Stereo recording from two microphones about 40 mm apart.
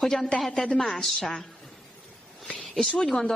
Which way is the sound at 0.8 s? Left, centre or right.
Centre.